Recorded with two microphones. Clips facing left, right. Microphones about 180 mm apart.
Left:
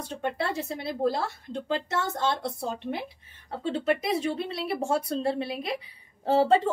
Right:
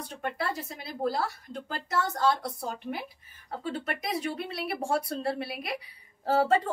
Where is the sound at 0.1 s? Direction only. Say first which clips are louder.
Left 3 dB; 25° left (ahead or behind).